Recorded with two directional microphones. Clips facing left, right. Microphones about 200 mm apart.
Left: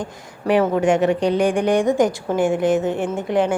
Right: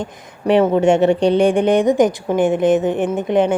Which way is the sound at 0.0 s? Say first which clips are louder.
Right 3 dB; 25° right (ahead or behind).